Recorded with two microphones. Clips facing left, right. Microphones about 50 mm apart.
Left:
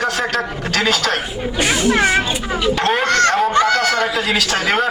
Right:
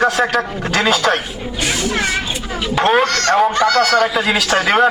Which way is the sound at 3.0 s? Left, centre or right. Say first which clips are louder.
Even; left.